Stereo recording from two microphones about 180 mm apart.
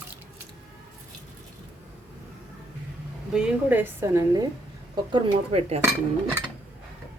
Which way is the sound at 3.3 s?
5° right (ahead or behind).